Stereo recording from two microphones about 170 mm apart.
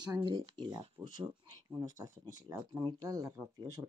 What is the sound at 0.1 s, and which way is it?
Speech, 25° right (ahead or behind).